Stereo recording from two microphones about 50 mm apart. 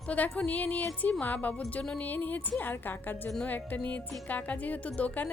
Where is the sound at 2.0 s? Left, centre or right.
Left.